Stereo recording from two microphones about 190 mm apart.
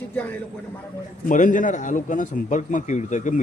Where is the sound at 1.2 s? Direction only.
45° left (ahead or behind).